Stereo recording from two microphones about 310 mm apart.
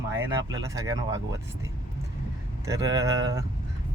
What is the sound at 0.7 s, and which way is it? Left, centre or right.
Speech, centre.